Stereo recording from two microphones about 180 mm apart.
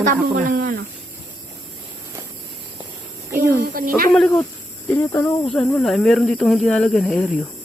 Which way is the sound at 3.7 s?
50° right (ahead or behind).